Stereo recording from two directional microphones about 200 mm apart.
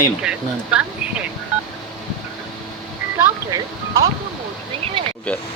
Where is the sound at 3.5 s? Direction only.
30° right (ahead or behind).